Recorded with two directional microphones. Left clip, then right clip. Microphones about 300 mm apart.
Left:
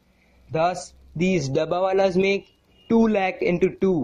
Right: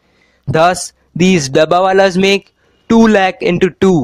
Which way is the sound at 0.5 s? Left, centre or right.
Right.